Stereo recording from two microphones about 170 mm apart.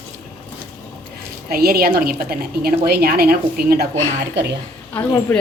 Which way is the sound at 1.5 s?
60° right (ahead or behind).